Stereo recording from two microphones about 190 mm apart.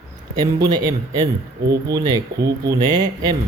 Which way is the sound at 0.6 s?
20° right (ahead or behind).